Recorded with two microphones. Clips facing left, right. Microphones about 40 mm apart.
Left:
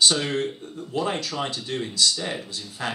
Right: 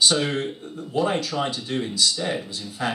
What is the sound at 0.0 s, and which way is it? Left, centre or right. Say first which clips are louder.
Speech: right 1 dB; centre.